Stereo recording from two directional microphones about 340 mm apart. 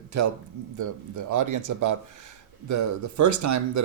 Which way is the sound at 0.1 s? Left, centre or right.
Right.